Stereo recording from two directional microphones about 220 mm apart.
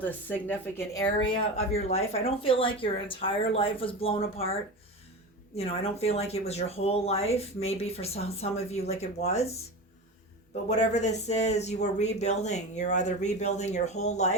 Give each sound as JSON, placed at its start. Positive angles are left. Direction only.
{"t": 0.0, "sound": "a woman's voice", "side_deg": 10}
{"t": 5.5, "sound": "a woman's voice", "side_deg": 30}
{"t": 10.5, "sound": "speech", "side_deg": 30}